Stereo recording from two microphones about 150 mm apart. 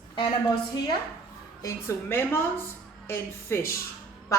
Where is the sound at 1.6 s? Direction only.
15° left (ahead or behind).